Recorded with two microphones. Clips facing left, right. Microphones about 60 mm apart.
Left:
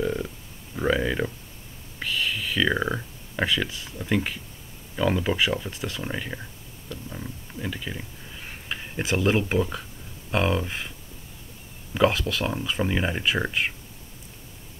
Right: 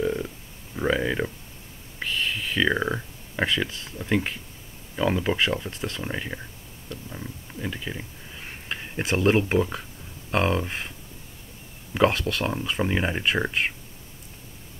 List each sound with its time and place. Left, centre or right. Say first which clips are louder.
0.0 s a sound: right 1 dB; centre
2.7 s speech: even; centre
3.6 s speech: even; centre
4.1 s speech: right 1 dB; centre
6.9 s a sound: left 1 dB; centre
7.7 s speech: even; centre
12.1 s speech: even; centre